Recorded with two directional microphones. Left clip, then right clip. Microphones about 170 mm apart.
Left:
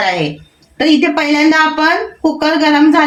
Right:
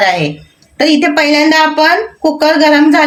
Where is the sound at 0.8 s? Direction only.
50° right (ahead or behind).